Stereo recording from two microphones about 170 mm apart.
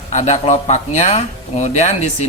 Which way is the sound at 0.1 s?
40° left (ahead or behind).